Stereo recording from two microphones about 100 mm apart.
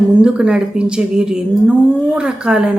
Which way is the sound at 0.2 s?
10° right (ahead or behind).